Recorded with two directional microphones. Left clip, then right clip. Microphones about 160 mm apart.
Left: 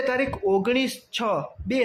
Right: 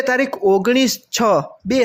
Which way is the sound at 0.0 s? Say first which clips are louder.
Right 7 dB; 35° right (ahead or behind).